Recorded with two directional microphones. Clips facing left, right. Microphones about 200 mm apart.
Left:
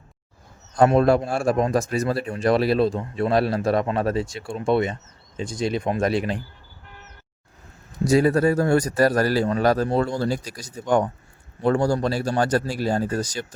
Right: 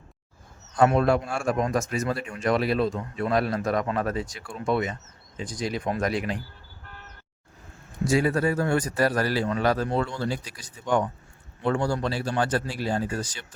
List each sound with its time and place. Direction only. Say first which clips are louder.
0.8 s a man's voice: left 4 dB; 35° left (ahead or behind)
8.0 s a man's voice: left 5 dB; 40° left (ahead or behind)